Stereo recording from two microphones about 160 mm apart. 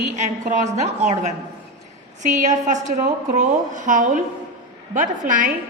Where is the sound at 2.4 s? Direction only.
50° right (ahead or behind).